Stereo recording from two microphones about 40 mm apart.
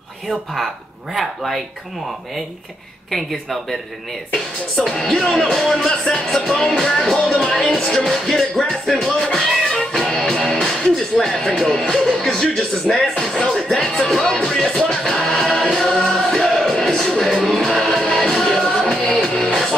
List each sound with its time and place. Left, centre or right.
1.1 s music: centre
3.1 s music: centre
7.5 s music: centre
9.1 s music: centre
10.5 s speech: centre
13.1 s music: centre